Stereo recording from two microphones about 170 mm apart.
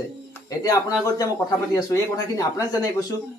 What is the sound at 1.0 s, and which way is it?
Speech, 20° left (ahead or behind).